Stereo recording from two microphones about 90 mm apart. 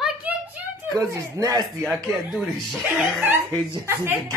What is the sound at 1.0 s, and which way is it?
Speech, 35° right (ahead or behind).